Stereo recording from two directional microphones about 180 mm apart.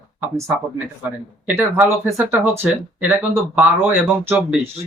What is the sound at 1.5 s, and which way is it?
Speech, 10° right (ahead or behind).